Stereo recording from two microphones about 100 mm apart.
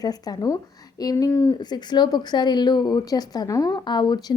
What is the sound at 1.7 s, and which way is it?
A woman's voice, 45° left (ahead or behind).